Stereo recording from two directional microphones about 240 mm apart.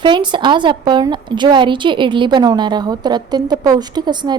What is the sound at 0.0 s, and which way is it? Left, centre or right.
A woman's voice, centre.